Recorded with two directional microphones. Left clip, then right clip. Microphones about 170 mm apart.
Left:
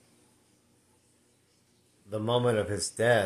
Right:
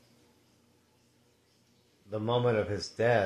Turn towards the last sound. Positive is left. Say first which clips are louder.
# left 2 dB
turn(degrees=15)  # may be behind; listen again after turning